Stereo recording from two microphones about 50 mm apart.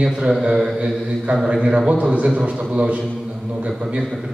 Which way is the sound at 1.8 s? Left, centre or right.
Right.